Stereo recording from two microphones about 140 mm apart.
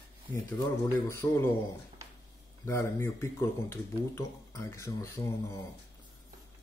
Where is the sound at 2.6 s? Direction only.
20° left (ahead or behind).